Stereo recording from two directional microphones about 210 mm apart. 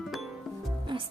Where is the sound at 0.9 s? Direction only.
20° right (ahead or behind).